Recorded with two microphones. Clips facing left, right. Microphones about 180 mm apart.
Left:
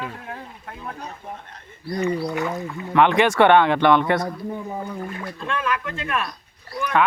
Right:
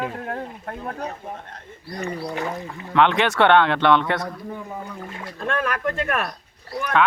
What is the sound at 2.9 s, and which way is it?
Speech, 10° left (ahead or behind).